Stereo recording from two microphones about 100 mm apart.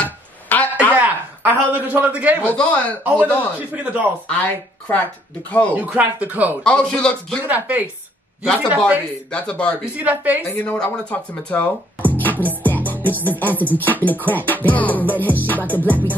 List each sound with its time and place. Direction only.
0.0 s a sound: 15° left (ahead or behind)
0.9 s speech: 15° right (ahead or behind)
2.4 s music: 15° left (ahead or behind)
3.0 s speech: 15° right (ahead or behind)
4.3 s music: 15° left (ahead or behind)
5.8 s speech: 15° right (ahead or behind)
6.6 s music: 10° left (ahead or behind)
7.4 s speech: 15° right (ahead or behind)
9.3 s music: 10° left (ahead or behind)
9.9 s speech: 15° right (ahead or behind)
10.5 s speech: 15° left (ahead or behind)
12.4 s music: 20° left (ahead or behind)